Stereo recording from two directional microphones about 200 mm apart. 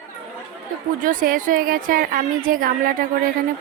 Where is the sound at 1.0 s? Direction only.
45° right (ahead or behind).